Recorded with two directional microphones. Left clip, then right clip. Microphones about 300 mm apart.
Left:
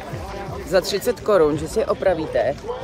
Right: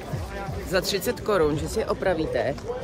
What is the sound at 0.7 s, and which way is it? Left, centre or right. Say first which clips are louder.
Speech: left 6 dB; centre.